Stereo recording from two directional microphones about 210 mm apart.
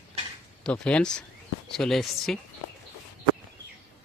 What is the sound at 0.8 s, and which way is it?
Speech, 5° left (ahead or behind).